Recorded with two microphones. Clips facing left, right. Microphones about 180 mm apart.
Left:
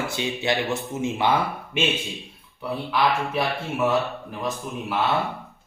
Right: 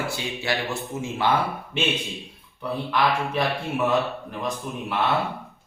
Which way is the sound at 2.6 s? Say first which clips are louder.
Even; 5° left (ahead or behind).